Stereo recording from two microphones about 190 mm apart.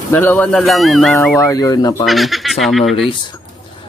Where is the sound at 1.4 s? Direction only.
15° left (ahead or behind).